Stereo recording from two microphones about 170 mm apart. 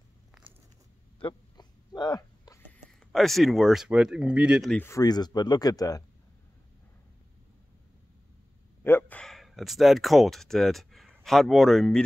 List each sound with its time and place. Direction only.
1.2 s a sound: 25° left (ahead or behind)
2.6 s speech: centre (ahead or behind)
4.7 s speech: 15° left (ahead or behind)
8.8 s speech: 10° left (ahead or behind)